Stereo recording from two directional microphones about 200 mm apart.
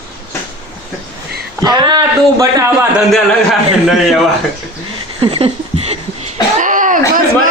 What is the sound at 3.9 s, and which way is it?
Speech, centre (ahead or behind).